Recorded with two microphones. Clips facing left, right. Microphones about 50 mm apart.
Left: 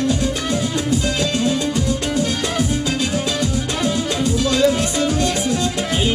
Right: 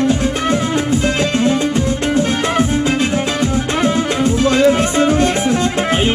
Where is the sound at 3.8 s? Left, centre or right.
Right.